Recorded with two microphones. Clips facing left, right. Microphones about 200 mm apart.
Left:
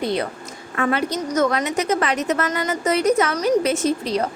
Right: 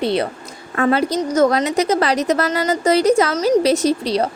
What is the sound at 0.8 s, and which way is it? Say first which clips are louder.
A woman's voice: right 5 dB; 35° right (ahead or behind).